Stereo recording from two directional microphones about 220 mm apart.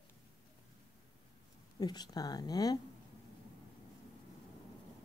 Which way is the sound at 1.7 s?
20° left (ahead or behind).